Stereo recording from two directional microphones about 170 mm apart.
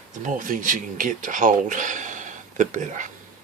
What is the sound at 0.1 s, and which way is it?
Speech, 50° right (ahead or behind).